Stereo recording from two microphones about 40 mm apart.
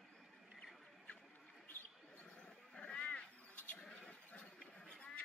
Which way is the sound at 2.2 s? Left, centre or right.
Left.